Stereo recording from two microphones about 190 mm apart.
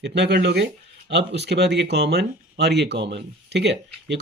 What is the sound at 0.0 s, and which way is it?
Speech, 65° right (ahead or behind).